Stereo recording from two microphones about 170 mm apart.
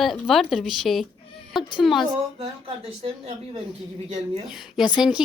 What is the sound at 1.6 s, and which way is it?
Speech, 25° left (ahead or behind).